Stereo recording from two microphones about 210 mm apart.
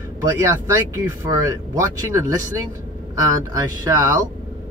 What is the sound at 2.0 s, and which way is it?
Speech, 15° right (ahead or behind).